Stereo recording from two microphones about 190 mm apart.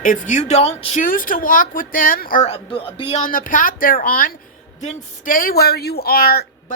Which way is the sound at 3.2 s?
45° left (ahead or behind).